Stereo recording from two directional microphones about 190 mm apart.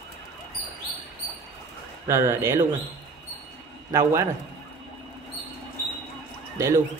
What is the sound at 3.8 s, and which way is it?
Speech, 15° right (ahead or behind).